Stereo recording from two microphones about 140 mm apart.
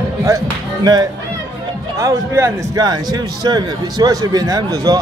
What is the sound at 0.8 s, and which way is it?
A man's voice, 30° right (ahead or behind).